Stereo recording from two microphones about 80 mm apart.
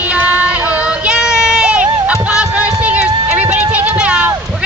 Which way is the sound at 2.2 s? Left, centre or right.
Centre.